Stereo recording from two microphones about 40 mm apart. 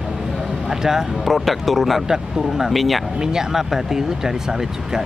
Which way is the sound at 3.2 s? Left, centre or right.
Centre.